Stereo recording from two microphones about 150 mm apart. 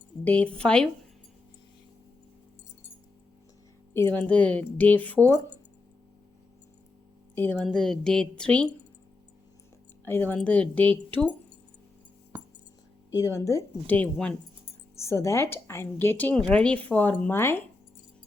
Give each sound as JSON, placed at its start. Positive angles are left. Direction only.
{"t": 0.3, "sound": "a woman's voice", "side_deg": 10}
{"t": 3.9, "sound": "a woman's voice", "side_deg": 15}
{"t": 7.3, "sound": "a woman's voice", "side_deg": 10}
{"t": 10.1, "sound": "a woman's voice", "side_deg": 10}
{"t": 12.3, "sound": "a sound", "side_deg": -15}
{"t": 13.1, "sound": "a woman's voice", "side_deg": 20}